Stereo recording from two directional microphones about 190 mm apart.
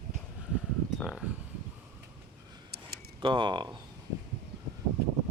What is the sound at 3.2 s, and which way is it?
Speech, 25° right (ahead or behind).